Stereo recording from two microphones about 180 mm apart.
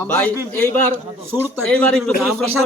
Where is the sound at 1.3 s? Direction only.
10° right (ahead or behind).